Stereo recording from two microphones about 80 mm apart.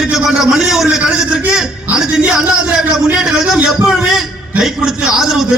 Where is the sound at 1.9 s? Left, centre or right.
Right.